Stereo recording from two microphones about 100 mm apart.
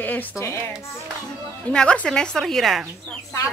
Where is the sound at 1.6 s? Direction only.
10° left (ahead or behind).